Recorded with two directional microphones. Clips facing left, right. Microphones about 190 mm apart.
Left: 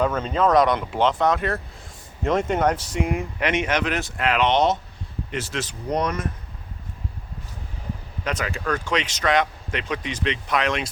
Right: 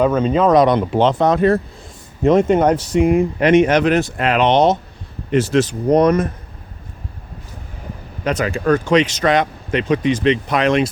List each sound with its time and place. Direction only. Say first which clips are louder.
0.0 s speech: right 7 dB; 15° right (ahead or behind); by 1.5 s 30° right (ahead or behind)
2.2 s speech: right 8 dB; 20° right (ahead or behind)
5.3 s speech: right 15 dB; 45° right (ahead or behind)
8.2 s speech: right 9 dB; 35° right (ahead or behind)